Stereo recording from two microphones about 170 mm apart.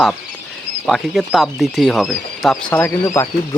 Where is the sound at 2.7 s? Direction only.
15° left (ahead or behind).